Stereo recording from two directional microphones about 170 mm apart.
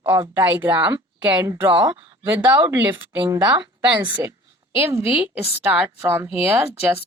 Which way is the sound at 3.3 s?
25° right (ahead or behind).